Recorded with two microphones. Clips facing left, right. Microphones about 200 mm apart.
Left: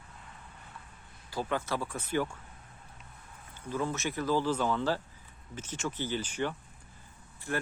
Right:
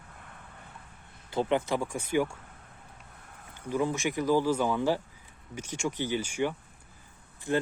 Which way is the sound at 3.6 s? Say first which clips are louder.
Right 4 dB; 15° right (ahead or behind).